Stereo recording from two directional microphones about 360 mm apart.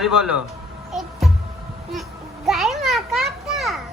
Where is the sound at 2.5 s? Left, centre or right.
Centre.